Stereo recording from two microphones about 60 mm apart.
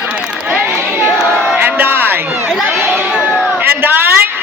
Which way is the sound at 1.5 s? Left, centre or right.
Right.